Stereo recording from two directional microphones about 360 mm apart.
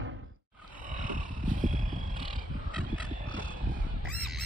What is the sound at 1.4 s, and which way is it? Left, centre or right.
Wild animals, right.